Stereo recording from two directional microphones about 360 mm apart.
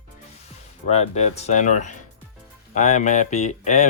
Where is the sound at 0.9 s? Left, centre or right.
Centre.